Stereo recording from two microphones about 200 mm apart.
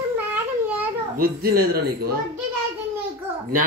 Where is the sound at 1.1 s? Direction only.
45° right (ahead or behind).